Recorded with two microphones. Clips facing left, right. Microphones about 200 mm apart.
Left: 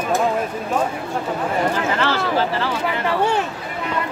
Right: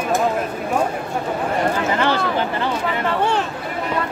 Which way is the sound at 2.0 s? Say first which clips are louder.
Left 1 dB; 15° right (ahead or behind).